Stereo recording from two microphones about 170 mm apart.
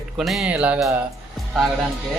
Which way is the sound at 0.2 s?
Centre (ahead or behind).